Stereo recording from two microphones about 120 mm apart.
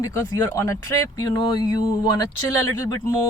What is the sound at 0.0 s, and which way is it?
Speech, 25° left (ahead or behind).